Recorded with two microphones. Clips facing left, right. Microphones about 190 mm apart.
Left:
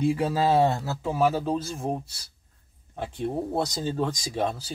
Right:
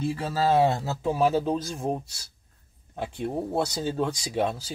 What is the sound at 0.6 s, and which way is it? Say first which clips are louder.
Speech: even; 15° right (ahead or behind).